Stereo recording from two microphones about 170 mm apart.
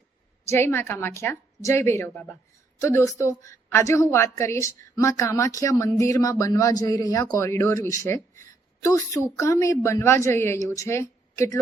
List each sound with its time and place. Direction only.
0.4 s a woman's voice: 15° left (ahead or behind)